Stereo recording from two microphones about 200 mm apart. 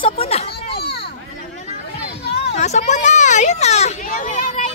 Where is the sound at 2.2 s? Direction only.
55° left (ahead or behind).